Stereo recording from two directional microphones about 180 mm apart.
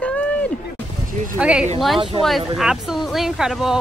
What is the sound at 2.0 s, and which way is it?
Speech, 30° right (ahead or behind).